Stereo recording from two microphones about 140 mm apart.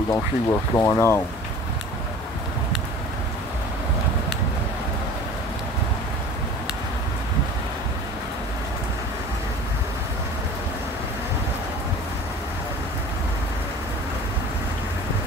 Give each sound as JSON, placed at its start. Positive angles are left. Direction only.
{"t": 0.1, "sound": "speech", "side_deg": 20}